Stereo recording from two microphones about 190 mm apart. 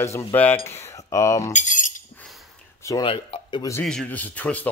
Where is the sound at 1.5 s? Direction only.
40° left (ahead or behind).